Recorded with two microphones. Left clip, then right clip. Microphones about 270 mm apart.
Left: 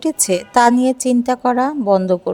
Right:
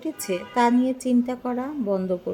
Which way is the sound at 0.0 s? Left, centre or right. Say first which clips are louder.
Left 10 dB; left.